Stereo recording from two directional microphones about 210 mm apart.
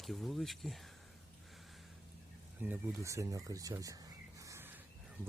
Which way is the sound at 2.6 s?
15° right (ahead or behind).